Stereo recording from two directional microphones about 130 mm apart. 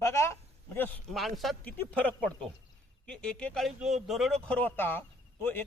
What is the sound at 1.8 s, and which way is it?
Speech, 10° left (ahead or behind).